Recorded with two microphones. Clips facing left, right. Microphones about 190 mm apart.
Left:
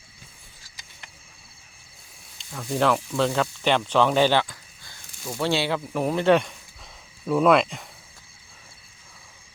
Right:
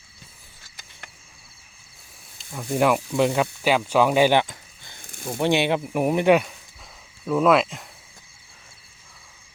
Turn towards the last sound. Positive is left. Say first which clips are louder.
# even
turn(degrees=0)  # may be behind; listen again after turning